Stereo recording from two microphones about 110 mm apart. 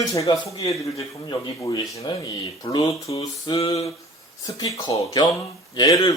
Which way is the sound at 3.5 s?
65° left (ahead or behind).